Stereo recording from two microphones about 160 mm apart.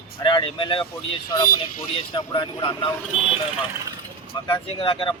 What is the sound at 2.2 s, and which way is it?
Speech, 30° left (ahead or behind).